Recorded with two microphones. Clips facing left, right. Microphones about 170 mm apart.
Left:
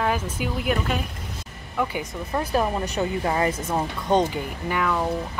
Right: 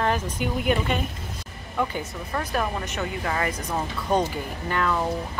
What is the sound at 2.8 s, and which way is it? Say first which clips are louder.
Speech: left 5 dB; 35° left (ahead or behind).